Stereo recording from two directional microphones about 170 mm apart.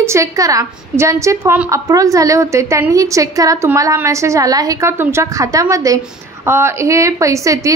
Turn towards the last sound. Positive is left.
turn(degrees=-20)  # may be behind; listen again after turning